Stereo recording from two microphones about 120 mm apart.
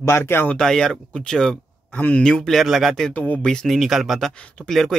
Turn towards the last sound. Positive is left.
turn(degrees=5)  # may be behind; listen again after turning